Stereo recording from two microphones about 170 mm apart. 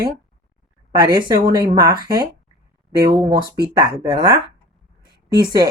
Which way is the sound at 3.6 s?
25° right (ahead or behind).